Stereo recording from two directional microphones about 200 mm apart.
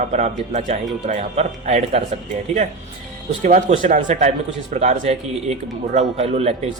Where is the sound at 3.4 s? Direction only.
40° right (ahead or behind).